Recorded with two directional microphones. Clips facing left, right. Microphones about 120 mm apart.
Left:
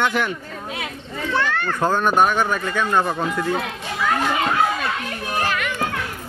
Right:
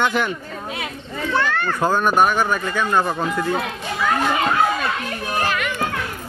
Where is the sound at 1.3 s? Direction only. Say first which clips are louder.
Right 1 dB; 45° right (ahead or behind).